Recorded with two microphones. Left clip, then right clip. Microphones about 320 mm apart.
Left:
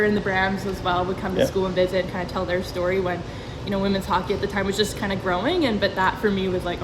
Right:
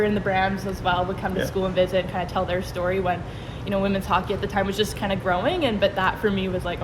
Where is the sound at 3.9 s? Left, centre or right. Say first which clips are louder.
Even; centre.